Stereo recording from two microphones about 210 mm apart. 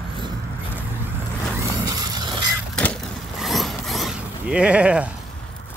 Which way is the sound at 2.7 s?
5° left (ahead or behind).